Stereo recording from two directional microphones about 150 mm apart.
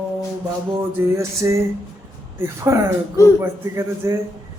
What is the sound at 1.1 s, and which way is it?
A man's voice, 20° right (ahead or behind).